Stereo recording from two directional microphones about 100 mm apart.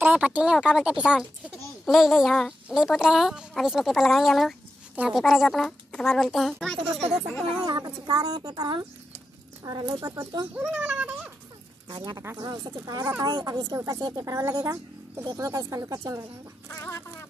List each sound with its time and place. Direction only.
0.0 s a woman's voice: 15° right (ahead or behind)
6.8 s speech: 20° right (ahead or behind)
7.6 s speech: 45° right (ahead or behind)
10.7 s speech: 15° right (ahead or behind)
11.9 s speech: 45° right (ahead or behind)
13.2 s speech: 45° right (ahead or behind)
13.7 s speech: 35° right (ahead or behind)
16.6 s a sound: 25° left (ahead or behind)